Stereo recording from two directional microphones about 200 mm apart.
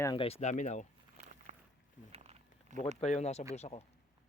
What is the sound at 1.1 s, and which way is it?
Walk, 40° right (ahead or behind).